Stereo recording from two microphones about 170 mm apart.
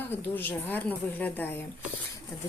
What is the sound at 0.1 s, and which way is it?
Speech, 10° left (ahead or behind).